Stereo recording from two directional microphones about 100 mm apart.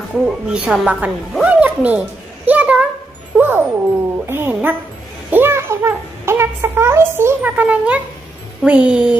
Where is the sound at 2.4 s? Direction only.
15° right (ahead or behind).